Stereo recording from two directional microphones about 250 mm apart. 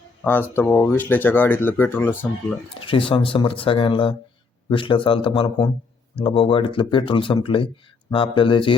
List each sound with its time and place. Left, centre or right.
0.5 s speech: centre
2.8 s speech: left